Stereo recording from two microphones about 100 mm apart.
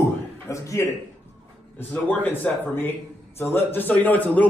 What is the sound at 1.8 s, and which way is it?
A man's voice, 15° left (ahead or behind).